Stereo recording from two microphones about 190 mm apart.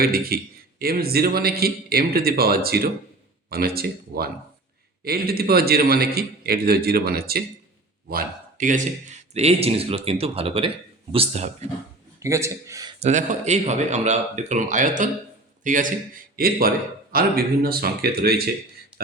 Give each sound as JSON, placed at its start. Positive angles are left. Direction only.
{"t": 0.0, "sound": "a man's voice", "side_deg": -50}
{"t": 12.2, "sound": "a man's voice", "side_deg": -15}
{"t": 13.0, "sound": "a man's voice", "side_deg": -40}